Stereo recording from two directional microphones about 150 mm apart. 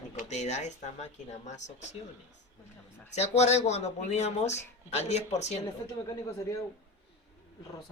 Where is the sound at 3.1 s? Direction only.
45° left (ahead or behind).